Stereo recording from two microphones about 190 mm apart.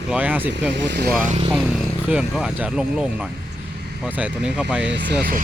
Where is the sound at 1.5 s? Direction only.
Centre (ahead or behind).